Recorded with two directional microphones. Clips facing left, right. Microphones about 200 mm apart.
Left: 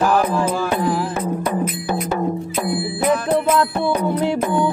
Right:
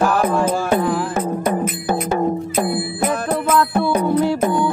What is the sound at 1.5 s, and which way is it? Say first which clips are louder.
Music: right 2 dB; 40° right (ahead or behind).